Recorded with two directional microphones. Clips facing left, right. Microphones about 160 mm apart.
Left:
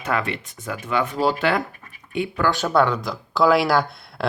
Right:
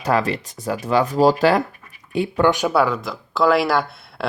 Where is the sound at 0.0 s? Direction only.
35° right (ahead or behind).